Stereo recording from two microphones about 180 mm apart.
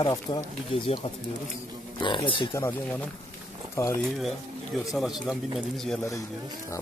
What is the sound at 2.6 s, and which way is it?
Speech, 15° left (ahead or behind).